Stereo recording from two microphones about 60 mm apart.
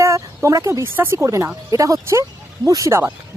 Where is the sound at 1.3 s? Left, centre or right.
Right.